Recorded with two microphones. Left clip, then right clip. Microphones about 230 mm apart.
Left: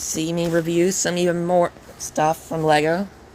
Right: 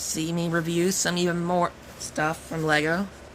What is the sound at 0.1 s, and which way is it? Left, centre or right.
Speech, centre.